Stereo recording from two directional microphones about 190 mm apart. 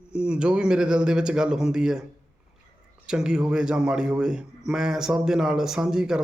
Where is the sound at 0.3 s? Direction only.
5° right (ahead or behind).